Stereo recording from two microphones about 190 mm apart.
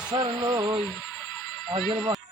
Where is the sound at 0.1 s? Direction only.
20° right (ahead or behind).